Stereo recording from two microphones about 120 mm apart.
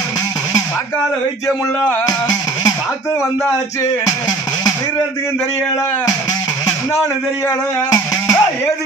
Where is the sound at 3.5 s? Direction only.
30° left (ahead or behind).